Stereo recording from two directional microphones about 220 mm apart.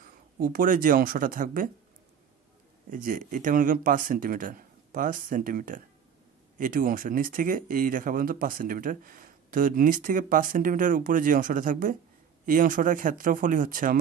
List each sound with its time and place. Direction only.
0.0 s speech: 40° right (ahead or behind)
2.9 s speech: 35° right (ahead or behind)